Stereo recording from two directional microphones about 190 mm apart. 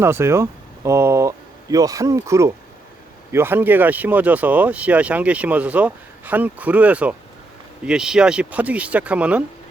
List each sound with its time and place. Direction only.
0.0 s speech: 15° right (ahead or behind)